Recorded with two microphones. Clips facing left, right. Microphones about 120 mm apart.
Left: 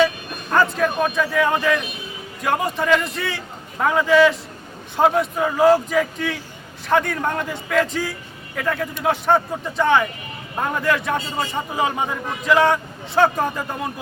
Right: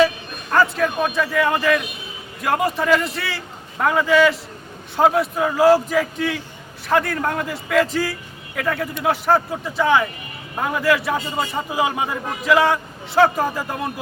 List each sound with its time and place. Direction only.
0.5 s a man's voice: centre (ahead or behind)